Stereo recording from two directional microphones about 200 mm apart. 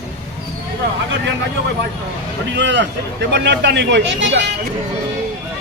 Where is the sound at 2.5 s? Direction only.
60° right (ahead or behind).